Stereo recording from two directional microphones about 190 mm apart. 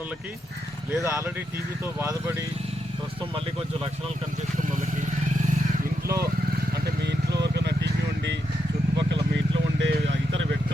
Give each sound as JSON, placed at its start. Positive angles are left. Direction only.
{"t": 1.0, "sound": "speech", "side_deg": -15}
{"t": 7.0, "sound": "vehicle", "side_deg": -60}
{"t": 9.0, "sound": "a sound", "side_deg": -70}
{"t": 9.8, "sound": "vehicle", "side_deg": -70}